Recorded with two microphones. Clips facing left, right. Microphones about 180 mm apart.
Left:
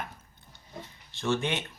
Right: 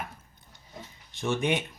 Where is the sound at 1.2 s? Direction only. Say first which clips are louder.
Right 2 dB; 15° right (ahead or behind).